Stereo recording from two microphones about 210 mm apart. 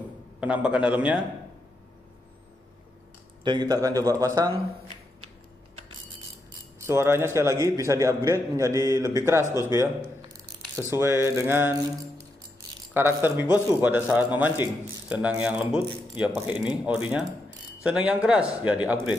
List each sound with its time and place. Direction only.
0.4 s a man's voice: 5° right (ahead or behind)
3.4 s speech: 20° right (ahead or behind)
6.9 s speech: 10° right (ahead or behind)
9.4 s speech: 15° left (ahead or behind)
10.3 s speech: 15° right (ahead or behind)
12.9 s a man's voice: 10° right (ahead or behind)